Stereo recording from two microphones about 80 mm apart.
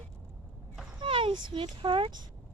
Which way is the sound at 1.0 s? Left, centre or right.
Right.